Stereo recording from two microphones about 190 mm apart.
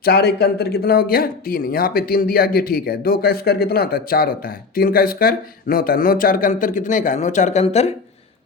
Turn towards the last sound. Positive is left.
turn(degrees=35)  # may be behind; listen again after turning